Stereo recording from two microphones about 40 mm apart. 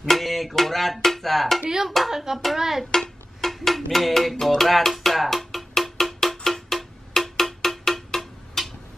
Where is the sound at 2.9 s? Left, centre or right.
Centre.